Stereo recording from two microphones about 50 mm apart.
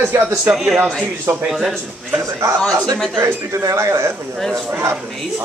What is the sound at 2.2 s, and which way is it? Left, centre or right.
A man's voice, right.